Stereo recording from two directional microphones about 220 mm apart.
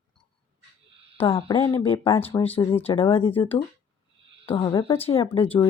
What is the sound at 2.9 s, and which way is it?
Speech, 25° left (ahead or behind).